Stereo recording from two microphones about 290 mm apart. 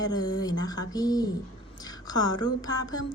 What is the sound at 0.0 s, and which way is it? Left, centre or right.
Speech, centre.